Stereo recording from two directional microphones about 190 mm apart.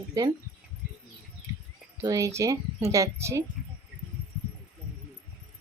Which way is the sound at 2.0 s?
15° right (ahead or behind).